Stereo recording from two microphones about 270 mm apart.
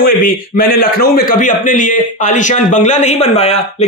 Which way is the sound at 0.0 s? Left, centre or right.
Left.